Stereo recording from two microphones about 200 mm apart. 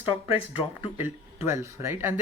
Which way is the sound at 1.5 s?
10° right (ahead or behind).